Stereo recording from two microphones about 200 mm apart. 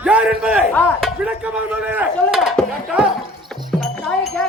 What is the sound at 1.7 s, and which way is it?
Speech, 10° right (ahead or behind).